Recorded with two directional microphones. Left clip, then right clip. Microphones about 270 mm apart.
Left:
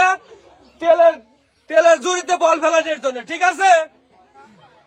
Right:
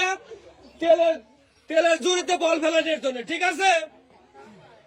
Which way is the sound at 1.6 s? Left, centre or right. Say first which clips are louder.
Left 7 dB; centre.